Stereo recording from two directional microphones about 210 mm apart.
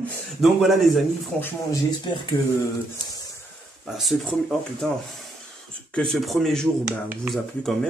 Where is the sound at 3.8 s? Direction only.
Centre (ahead or behind).